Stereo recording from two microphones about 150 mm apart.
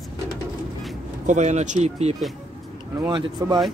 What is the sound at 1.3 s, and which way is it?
Speech, 50° right (ahead or behind).